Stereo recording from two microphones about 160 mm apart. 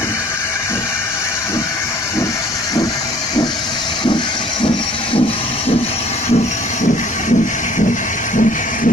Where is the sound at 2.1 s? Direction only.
20° left (ahead or behind).